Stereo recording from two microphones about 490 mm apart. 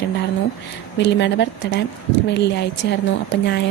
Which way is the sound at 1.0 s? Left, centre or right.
Left.